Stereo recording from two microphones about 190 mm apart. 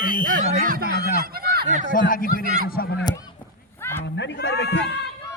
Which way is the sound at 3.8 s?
10° left (ahead or behind).